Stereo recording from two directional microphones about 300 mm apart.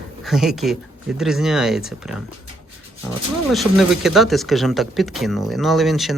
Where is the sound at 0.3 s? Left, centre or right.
Centre.